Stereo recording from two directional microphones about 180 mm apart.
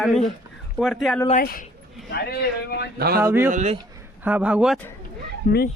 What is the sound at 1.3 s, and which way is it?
Speech, 50° left (ahead or behind).